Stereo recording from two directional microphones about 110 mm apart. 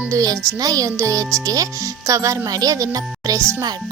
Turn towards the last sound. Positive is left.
turn(degrees=-30)  # may be behind; listen again after turning